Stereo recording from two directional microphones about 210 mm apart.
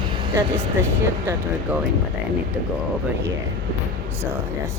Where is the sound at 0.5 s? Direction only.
10° right (ahead or behind).